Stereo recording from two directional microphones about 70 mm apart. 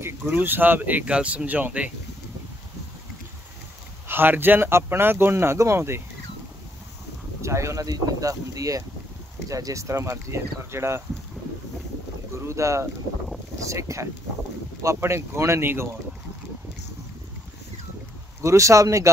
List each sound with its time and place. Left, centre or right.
0.4 s speech: right
4.1 s speech: right
7.4 s speech: right
12.4 s speech: right
18.4 s speech: right